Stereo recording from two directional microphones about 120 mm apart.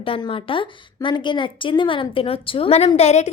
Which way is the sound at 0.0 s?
50° left (ahead or behind).